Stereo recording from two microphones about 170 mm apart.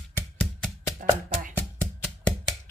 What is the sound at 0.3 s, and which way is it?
Music, 10° left (ahead or behind).